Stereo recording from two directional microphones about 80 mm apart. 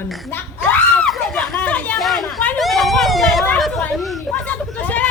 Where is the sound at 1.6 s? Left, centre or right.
Centre.